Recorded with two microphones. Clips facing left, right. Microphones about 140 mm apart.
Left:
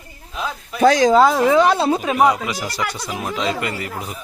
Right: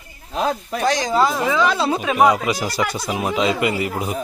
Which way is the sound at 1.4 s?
55° left (ahead or behind).